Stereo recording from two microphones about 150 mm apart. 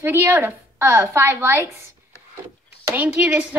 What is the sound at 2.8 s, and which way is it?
Speech, 10° right (ahead or behind).